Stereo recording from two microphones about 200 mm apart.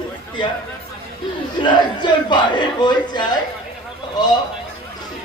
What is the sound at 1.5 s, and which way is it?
A man's voice, 25° left (ahead or behind).